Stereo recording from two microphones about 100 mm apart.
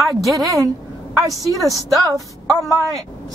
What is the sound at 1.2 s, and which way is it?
Speech, 35° right (ahead or behind).